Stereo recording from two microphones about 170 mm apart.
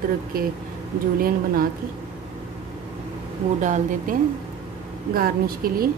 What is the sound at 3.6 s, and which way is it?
Speech, 45° right (ahead or behind).